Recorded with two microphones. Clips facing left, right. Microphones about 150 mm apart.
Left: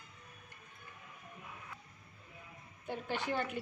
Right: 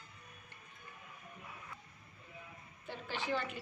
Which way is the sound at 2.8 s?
55° left (ahead or behind).